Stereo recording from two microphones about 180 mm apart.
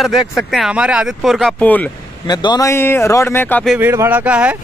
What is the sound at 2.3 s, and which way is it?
Speech, 25° left (ahead or behind).